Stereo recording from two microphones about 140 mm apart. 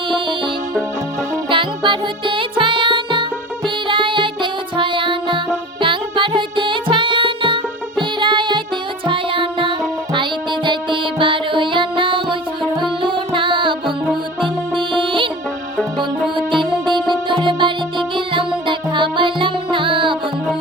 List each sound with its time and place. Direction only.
0.1 s music: 35° right (ahead or behind)
16.3 s music: 35° right (ahead or behind)